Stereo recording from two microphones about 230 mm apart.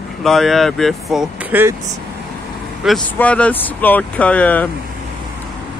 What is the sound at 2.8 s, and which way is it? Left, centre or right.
Speech, centre.